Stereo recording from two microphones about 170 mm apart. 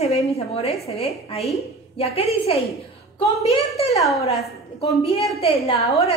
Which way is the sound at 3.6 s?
35° left (ahead or behind).